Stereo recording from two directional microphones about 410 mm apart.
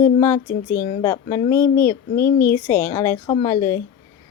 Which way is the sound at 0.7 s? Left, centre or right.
Centre.